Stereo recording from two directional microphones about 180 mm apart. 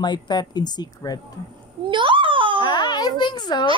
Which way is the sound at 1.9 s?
25° right (ahead or behind).